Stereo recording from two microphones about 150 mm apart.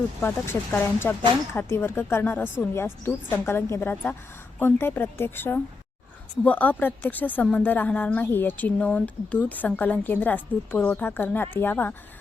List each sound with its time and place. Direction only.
0.2 s speech: 15° left (ahead or behind)